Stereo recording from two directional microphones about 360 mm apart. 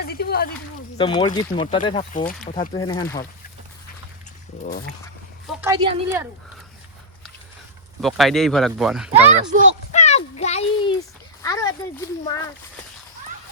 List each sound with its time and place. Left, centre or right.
0.0 s a sound: left
0.9 s speech: centre
4.6 s speech: left
5.5 s speech: centre
8.0 s speech: centre
9.9 s a sound: centre
11.4 s speech: centre